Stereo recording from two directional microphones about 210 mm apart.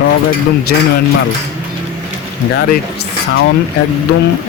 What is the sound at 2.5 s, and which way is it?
Speech, 55° left (ahead or behind).